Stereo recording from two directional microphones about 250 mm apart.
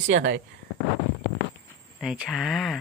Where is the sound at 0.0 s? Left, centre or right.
Right.